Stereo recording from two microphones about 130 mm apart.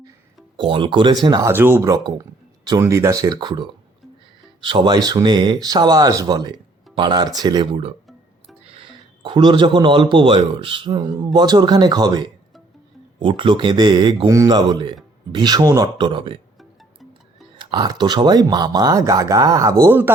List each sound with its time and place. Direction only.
0.5 s speech: 40° right (ahead or behind)
1.5 s speech: 15° right (ahead or behind)
1.9 s speech: 25° right (ahead or behind)
4.6 s a man's voice: 40° right (ahead or behind)
17.6 s speech: 35° right (ahead or behind); by 20.1 s 15° right (ahead or behind)